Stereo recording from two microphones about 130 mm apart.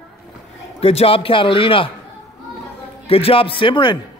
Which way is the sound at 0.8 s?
50° left (ahead or behind).